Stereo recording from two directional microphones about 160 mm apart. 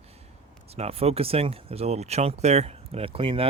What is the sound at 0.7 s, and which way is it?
Speech, 40° right (ahead or behind).